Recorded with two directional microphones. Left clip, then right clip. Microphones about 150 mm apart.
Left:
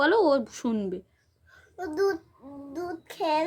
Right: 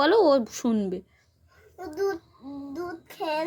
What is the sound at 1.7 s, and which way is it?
Babbling, 25° left (ahead or behind).